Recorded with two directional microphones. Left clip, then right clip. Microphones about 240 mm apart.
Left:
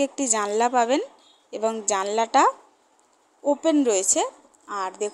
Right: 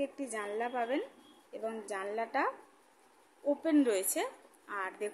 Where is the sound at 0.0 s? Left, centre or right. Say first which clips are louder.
Left 13 dB; left.